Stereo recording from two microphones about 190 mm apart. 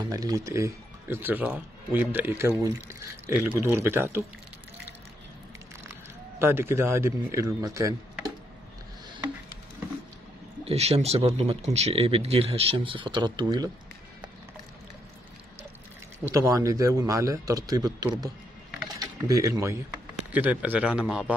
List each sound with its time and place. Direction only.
0.0 s speech: 20° right (ahead or behind)
6.4 s speech: 15° right (ahead or behind)
10.6 s speech: 30° right (ahead or behind)
16.3 s a man's voice: 15° right (ahead or behind)